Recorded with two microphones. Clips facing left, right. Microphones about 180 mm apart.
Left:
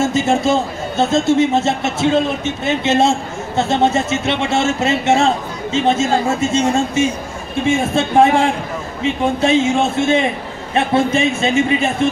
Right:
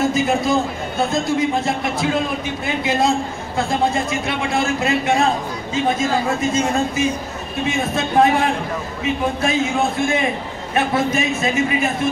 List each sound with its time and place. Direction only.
0.0 s a man's voice: 25° left (ahead or behind)